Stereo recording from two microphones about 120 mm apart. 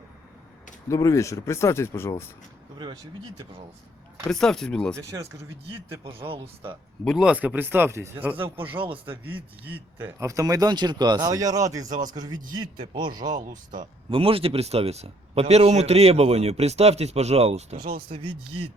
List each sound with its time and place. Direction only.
0.9 s speech: 25° left (ahead or behind)
4.3 s speech: 5° left (ahead or behind)
6.1 s speech: 50° right (ahead or behind)
7.0 s speech: centre (ahead or behind); by 8.4 s 20° right (ahead or behind)
8.7 s speech: 45° right (ahead or behind)
9.0 s speech: 15° right (ahead or behind); by 12.4 s 35° right (ahead or behind)
12.5 s speech: 45° right (ahead or behind)
14.1 s speech: 50° right (ahead or behind)
17.7 s speech: 45° right (ahead or behind)